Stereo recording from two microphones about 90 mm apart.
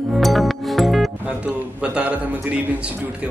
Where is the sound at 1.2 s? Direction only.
15° right (ahead or behind).